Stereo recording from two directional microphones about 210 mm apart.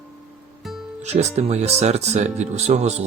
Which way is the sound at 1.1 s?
30° right (ahead or behind).